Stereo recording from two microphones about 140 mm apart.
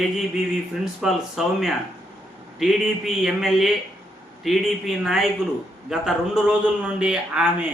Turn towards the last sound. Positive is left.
turn(degrees=-5)  # may be behind; listen again after turning